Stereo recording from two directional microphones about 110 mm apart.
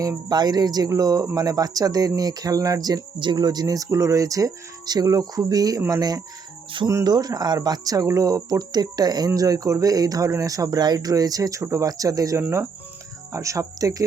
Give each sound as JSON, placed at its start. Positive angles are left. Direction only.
{"t": 0.0, "sound": "speech", "side_deg": -35}